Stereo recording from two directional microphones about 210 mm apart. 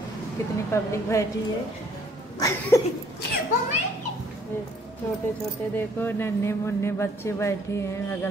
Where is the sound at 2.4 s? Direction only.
15° left (ahead or behind).